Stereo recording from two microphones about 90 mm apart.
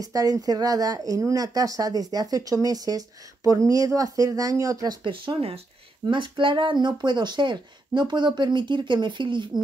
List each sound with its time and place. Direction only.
0.0 s speech: 40° right (ahead or behind)
5.0 s speech: 70° right (ahead or behind)
6.0 s speech: 65° right (ahead or behind)